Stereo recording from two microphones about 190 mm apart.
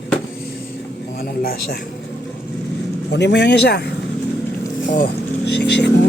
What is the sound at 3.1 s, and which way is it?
Speech, 65° left (ahead or behind).